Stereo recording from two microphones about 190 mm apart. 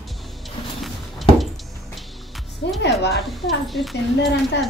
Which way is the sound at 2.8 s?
60° left (ahead or behind).